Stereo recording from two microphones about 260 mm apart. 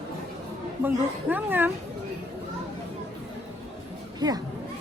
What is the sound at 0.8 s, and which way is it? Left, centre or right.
Speech, centre.